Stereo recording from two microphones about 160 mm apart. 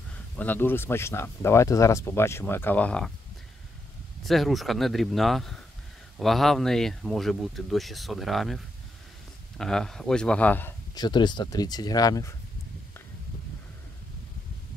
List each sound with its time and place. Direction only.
0.4 s speech: 10° left (ahead or behind)
4.2 s speech: centre (ahead or behind)
11.0 s speech: 25° left (ahead or behind)